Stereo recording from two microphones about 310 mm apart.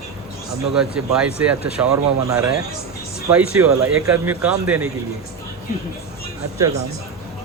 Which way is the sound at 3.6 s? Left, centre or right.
Centre.